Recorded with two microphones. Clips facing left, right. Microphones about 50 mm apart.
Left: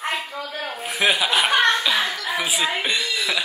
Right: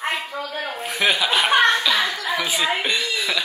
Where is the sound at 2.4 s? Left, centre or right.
Centre.